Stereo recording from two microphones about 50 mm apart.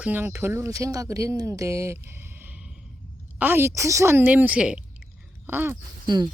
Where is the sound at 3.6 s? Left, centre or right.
Right.